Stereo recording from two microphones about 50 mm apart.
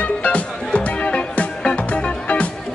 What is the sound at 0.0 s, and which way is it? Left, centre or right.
Music, left.